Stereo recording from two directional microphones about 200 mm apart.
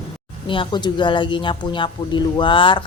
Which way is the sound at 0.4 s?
25° left (ahead or behind).